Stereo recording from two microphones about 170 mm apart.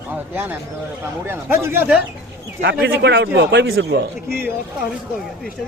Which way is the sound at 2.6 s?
75° right (ahead or behind).